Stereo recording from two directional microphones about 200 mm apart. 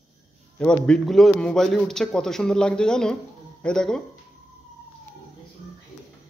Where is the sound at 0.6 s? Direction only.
5° left (ahead or behind).